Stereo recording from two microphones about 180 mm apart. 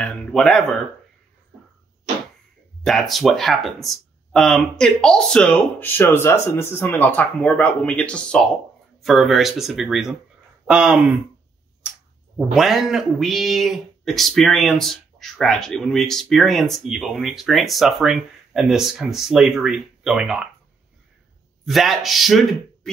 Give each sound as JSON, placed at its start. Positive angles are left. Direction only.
{"t": 0.0, "sound": "speech", "side_deg": 0}
{"t": 2.8, "sound": "speech", "side_deg": 0}
{"t": 11.8, "sound": "a sound", "side_deg": -5}
{"t": 12.4, "sound": "speech", "side_deg": 0}
{"t": 21.6, "sound": "speech", "side_deg": 0}